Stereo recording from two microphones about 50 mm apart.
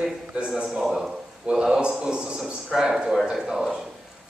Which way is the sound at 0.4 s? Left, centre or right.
Right.